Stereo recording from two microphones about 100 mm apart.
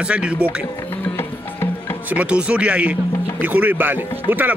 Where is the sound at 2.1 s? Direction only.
10° right (ahead or behind).